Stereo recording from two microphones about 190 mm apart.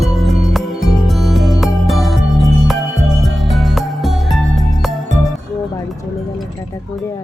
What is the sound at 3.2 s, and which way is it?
Music, centre (ahead or behind).